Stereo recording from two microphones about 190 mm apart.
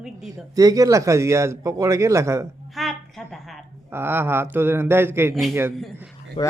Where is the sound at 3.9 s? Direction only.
10° right (ahead or behind).